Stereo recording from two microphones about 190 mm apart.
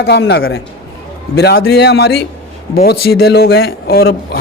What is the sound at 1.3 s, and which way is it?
A man's voice, 55° left (ahead or behind).